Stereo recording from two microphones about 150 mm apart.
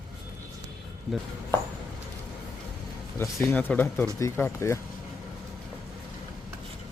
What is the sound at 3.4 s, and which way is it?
Speech, 10° left (ahead or behind).